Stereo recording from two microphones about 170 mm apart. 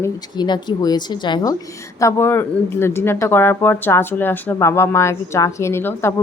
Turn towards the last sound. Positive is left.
turn(degrees=15)  # may be behind; listen again after turning